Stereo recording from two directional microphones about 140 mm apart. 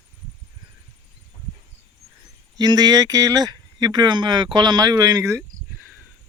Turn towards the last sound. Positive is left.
turn(degrees=-20)  # may be behind; listen again after turning